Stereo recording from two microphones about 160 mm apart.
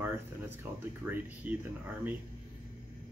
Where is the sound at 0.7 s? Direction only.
10° right (ahead or behind).